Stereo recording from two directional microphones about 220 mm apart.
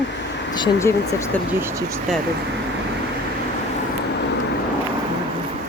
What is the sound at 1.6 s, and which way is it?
Speech, 10° right (ahead or behind).